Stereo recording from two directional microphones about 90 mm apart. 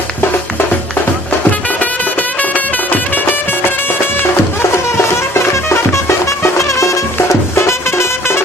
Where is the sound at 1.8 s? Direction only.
20° left (ahead or behind).